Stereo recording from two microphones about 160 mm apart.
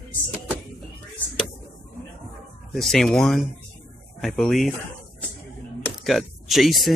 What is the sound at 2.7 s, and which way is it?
Speech, centre (ahead or behind).